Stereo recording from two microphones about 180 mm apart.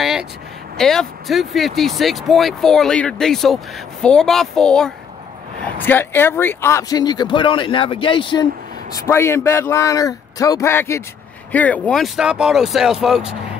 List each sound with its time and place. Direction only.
0.0 s a sound: centre (ahead or behind)
0.7 s speech: 5° left (ahead or behind); by 8.5 s 25° left (ahead or behind)
8.9 s a man's voice: 15° left (ahead or behind); by 13.4 s 5° right (ahead or behind)